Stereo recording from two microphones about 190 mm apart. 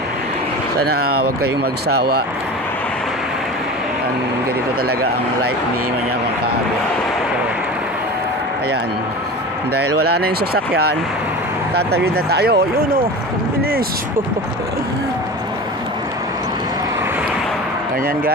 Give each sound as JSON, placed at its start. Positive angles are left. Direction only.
{"t": 0.7, "sound": "speech", "side_deg": -55}
{"t": 10.0, "sound": "speech", "side_deg": -55}
{"t": 11.9, "sound": "speech", "side_deg": -55}
{"t": 13.6, "sound": "a sound", "side_deg": -55}